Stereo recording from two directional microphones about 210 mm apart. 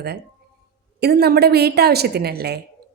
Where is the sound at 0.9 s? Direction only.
50° right (ahead or behind).